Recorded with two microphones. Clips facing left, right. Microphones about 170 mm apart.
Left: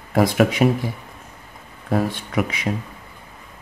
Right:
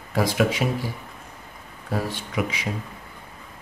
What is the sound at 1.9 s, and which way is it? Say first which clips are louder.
Speech: left 6 dB; 50° left (ahead or behind).